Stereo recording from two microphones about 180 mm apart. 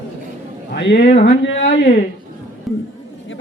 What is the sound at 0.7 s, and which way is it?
Speech, 70° left (ahead or behind).